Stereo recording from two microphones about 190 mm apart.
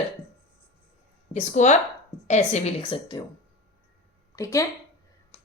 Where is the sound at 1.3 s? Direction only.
40° left (ahead or behind).